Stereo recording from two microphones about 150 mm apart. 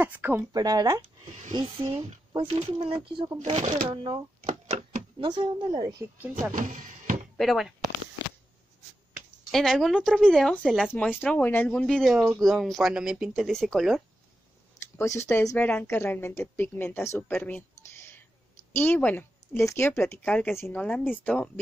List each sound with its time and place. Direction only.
0.0 s speech: 10° right (ahead or behind)
0.6 s a woman's voice: 25° right (ahead or behind); by 3.7 s 45° right (ahead or behind)
3.9 s a woman's voice: 35° right (ahead or behind)
4.4 s a sound: 50° right (ahead or behind)
5.2 s a woman's voice: 30° right (ahead or behind)
6.5 s music: 60° right (ahead or behind)
7.3 s speech: centre (ahead or behind)
9.5 s speech: 5° left (ahead or behind)
15.0 s a woman's voice: 15° left (ahead or behind)